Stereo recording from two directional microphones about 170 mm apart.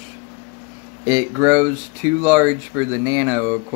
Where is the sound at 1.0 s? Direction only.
20° right (ahead or behind).